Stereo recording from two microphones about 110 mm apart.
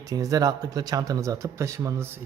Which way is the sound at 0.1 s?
35° right (ahead or behind).